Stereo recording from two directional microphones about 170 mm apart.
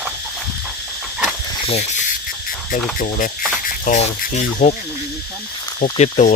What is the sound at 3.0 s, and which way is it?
Speech, 50° left (ahead or behind).